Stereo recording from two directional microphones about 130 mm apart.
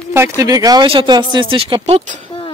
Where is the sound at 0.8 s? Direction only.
40° right (ahead or behind).